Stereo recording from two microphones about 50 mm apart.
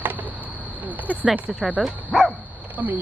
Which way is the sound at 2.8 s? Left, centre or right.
Right.